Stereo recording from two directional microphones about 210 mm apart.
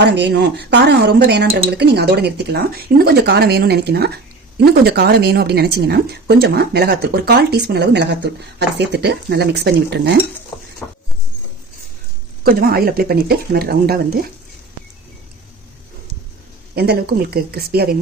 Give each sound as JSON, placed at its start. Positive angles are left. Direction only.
{"t": 0.0, "sound": "a woman's voice", "side_deg": -55}
{"t": 10.8, "sound": "a sound", "side_deg": 5}
{"t": 12.4, "sound": "a woman's voice", "side_deg": -45}
{"t": 16.7, "sound": "a woman's voice", "side_deg": -50}